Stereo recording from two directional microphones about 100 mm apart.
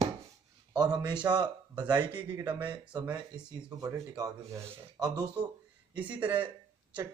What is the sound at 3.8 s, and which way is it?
Speech, 35° right (ahead or behind).